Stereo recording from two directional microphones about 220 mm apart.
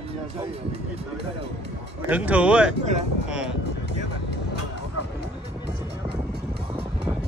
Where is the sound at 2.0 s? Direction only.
5° right (ahead or behind).